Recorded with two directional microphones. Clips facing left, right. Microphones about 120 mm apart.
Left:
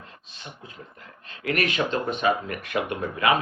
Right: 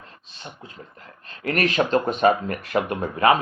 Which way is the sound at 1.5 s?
40° right (ahead or behind).